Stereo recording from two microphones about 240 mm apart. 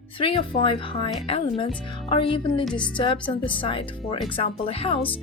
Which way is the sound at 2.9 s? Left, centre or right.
Left.